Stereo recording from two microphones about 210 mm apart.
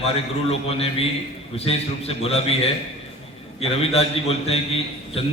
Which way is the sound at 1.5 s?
30° left (ahead or behind).